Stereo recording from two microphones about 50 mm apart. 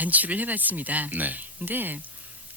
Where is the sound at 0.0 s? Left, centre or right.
Right.